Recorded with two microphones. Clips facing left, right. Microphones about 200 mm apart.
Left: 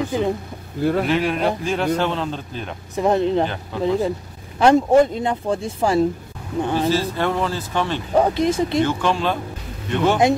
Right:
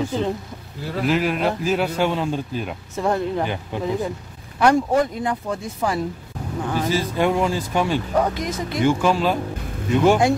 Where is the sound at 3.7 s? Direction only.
15° right (ahead or behind).